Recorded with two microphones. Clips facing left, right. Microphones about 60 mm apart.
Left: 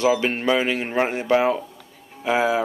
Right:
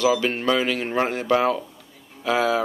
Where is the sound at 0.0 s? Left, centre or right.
Left.